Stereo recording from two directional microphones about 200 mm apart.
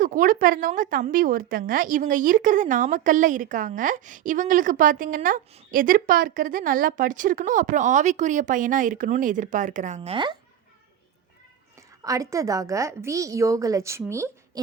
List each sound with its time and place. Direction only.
0.0 s a woman's voice: 45° right (ahead or behind); by 10.3 s 25° right (ahead or behind)
12.0 s a woman's voice: 15° right (ahead or behind)